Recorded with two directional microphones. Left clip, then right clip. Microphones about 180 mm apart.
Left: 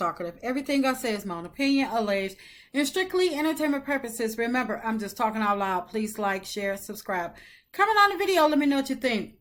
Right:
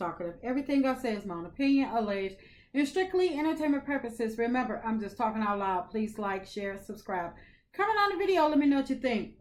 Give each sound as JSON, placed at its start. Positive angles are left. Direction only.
{"t": 0.0, "sound": "a woman's voice", "side_deg": 20}